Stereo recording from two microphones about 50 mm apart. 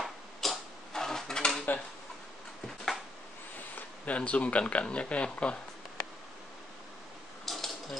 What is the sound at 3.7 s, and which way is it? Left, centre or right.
Speech, left.